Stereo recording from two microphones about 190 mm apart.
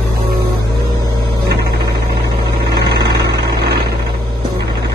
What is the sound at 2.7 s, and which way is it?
Vehicle, 60° right (ahead or behind).